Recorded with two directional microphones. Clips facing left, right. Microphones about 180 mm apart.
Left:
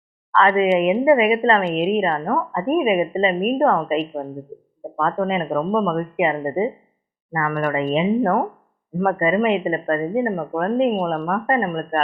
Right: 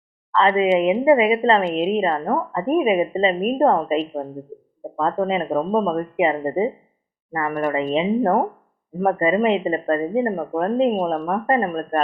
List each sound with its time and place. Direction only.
0.3 s speech: 20° right (ahead or behind)